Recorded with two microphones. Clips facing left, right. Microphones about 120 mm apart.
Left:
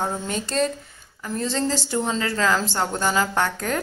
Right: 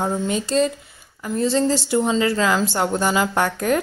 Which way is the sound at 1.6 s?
15° right (ahead or behind).